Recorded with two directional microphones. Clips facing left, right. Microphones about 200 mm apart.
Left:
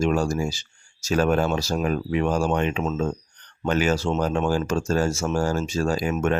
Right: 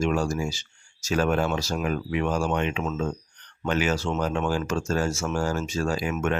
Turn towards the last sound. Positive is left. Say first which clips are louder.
# left 3 dB
turn(degrees=35)  # may be behind; listen again after turning